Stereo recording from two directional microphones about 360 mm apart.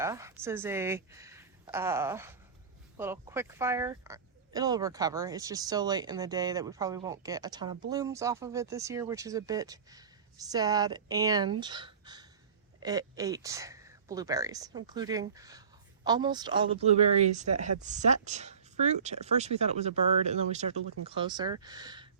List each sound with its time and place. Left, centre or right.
0.0 s speech: centre